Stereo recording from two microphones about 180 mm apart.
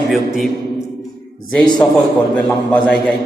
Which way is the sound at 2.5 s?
10° left (ahead or behind).